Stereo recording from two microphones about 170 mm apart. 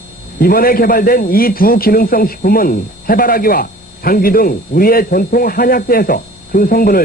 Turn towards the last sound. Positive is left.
turn(degrees=60)  # may be behind; listen again after turning